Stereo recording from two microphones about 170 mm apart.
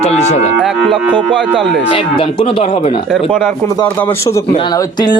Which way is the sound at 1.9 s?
30° left (ahead or behind).